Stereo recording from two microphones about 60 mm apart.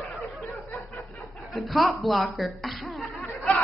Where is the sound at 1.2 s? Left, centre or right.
Centre.